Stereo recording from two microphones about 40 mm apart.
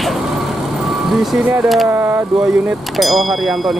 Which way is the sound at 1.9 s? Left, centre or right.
Right.